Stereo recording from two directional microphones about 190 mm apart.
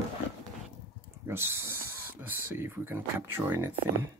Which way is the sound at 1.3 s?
15° right (ahead or behind).